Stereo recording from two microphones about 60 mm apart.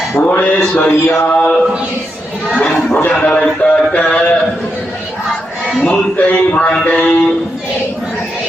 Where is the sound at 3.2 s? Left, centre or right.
Left.